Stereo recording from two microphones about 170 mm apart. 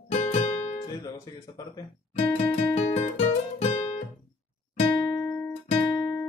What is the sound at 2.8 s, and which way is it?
Music, 35° left (ahead or behind).